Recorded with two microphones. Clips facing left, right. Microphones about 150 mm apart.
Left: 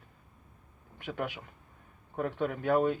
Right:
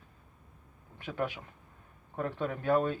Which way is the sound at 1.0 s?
10° left (ahead or behind).